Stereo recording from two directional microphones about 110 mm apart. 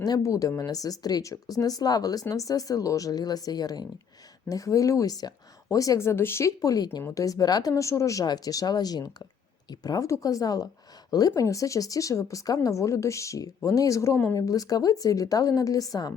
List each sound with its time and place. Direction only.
0.0 s speech: 35° left (ahead or behind)